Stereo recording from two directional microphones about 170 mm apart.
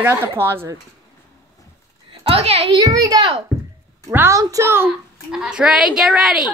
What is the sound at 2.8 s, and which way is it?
A child's voice, 20° right (ahead or behind).